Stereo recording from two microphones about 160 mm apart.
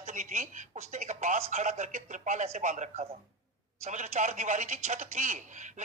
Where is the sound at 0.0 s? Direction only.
50° right (ahead or behind).